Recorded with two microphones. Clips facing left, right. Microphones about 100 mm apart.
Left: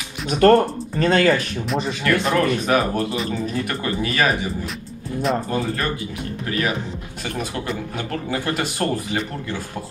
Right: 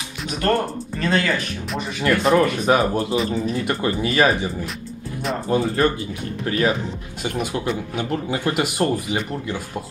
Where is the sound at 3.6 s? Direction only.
25° right (ahead or behind).